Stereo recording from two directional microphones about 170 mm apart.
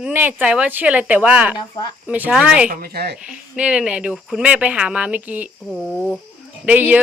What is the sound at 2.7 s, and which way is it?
Speech, 65° right (ahead or behind).